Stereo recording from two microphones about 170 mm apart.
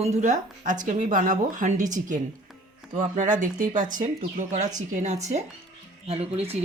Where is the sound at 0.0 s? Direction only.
45° right (ahead or behind).